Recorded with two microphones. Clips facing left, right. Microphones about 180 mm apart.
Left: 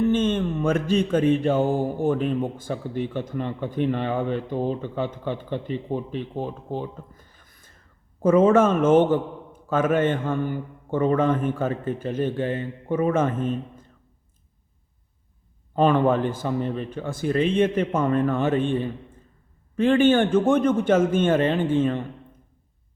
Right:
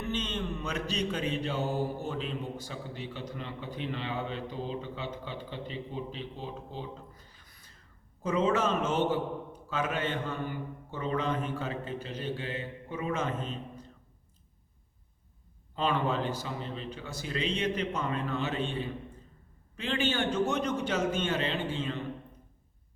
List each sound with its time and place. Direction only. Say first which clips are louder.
0.0 s mantra: left 13 dB; 50° left (ahead or behind)
15.7 s mantra: left 11 dB; 50° left (ahead or behind)